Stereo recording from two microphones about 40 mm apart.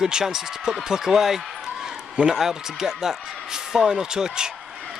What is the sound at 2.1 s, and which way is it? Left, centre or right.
A man's voice, right.